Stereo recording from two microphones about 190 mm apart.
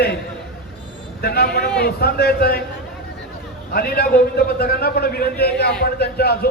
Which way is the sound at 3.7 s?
50° left (ahead or behind).